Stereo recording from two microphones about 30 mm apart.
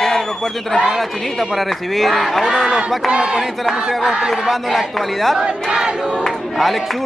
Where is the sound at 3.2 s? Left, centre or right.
Right.